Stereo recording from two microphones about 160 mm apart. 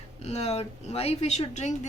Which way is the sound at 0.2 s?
40° left (ahead or behind).